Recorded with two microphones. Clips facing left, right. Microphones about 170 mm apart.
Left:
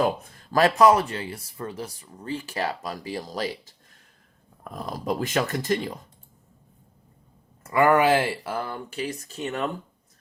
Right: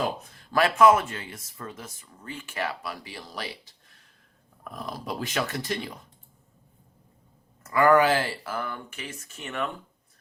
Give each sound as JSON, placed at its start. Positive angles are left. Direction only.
{"t": 0.5, "sound": "speech", "side_deg": 35}
{"t": 4.9, "sound": "speech", "side_deg": 45}
{"t": 7.6, "sound": "speech", "side_deg": 25}